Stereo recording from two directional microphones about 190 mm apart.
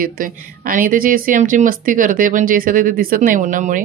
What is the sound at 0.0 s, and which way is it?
Speech, 45° right (ahead or behind).